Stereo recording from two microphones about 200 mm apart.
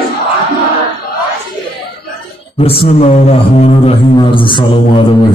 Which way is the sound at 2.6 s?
30° left (ahead or behind).